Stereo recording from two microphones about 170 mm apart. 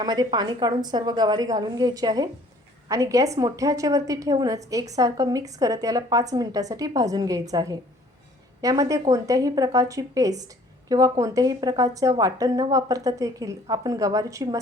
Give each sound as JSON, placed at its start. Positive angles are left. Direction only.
{"t": 0.0, "sound": "a woman's voice", "side_deg": -25}